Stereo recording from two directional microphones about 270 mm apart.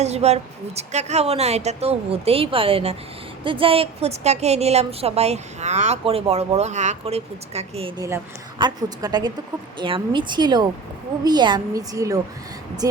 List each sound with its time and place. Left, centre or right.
0.0 s a woman's voice: right